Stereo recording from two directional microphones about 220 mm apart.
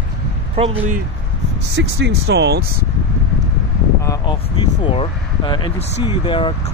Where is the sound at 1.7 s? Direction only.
50° right (ahead or behind).